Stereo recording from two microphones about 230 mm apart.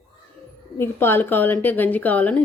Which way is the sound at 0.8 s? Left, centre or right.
Centre.